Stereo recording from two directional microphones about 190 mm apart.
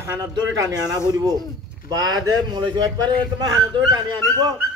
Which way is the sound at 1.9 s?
20° right (ahead or behind).